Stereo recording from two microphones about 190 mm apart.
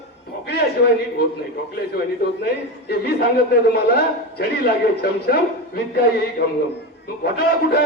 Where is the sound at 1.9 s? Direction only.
55° left (ahead or behind).